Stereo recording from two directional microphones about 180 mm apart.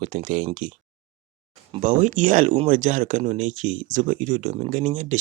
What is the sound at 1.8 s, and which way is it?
Speech, 45° right (ahead or behind).